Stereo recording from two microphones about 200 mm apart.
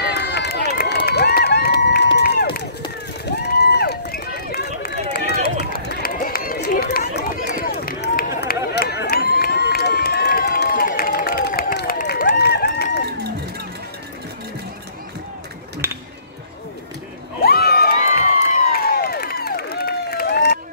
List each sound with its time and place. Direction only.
0.0 s run: 55° left (ahead or behind)
2.1 s crowd: 55° left (ahead or behind)
3.3 s run: 55° left (ahead or behind)
15.8 s music: 10° right (ahead or behind)
17.4 s crowd: 50° left (ahead or behind)